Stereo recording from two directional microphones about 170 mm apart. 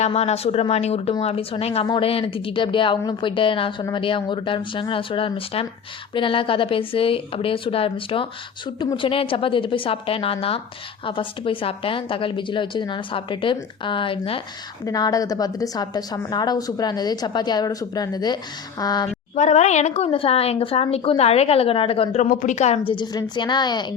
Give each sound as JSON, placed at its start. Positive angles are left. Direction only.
{"t": 0.0, "sound": "a woman's voice", "side_deg": 40}
{"t": 19.4, "sound": "speech", "side_deg": 45}
{"t": 22.3, "sound": "a woman's voice", "side_deg": 50}